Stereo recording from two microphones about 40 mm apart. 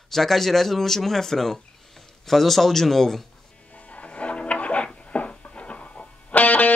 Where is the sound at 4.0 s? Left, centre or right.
Left.